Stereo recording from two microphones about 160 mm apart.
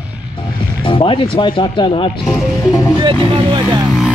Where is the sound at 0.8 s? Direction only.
35° left (ahead or behind).